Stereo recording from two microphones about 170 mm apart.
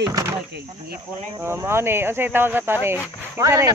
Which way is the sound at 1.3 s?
15° right (ahead or behind).